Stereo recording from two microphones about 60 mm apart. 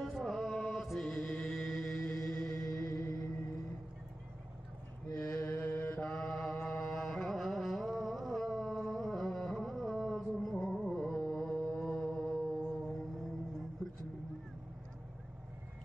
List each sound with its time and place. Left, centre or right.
0.0 s music: centre
2.6 s music: left
5.2 s mantra: left
5.9 s mantra: centre
6.9 s carnatic music: centre